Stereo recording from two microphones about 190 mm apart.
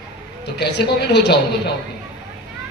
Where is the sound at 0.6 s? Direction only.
60° left (ahead or behind).